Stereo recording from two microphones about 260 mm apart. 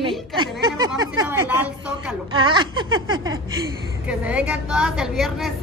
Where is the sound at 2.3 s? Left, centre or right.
Centre.